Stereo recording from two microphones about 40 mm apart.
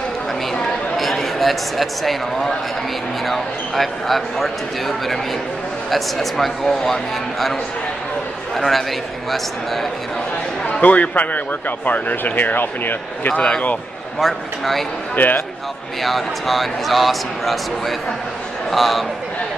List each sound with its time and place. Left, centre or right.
0.9 s a man's voice: centre
8.5 s speech: centre
10.8 s speech: left
13.3 s speech: left
14.2 s speech: centre
15.2 s speech: left
16.0 s speech: centre